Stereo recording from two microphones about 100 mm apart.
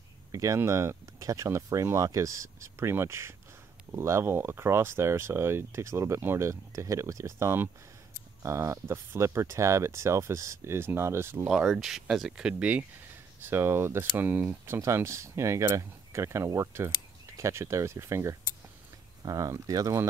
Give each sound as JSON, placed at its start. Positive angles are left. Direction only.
{"t": 0.3, "sound": "speech", "side_deg": -35}
{"t": 11.4, "sound": "speech", "side_deg": -5}